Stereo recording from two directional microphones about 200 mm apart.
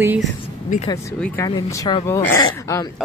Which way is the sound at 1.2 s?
15° left (ahead or behind).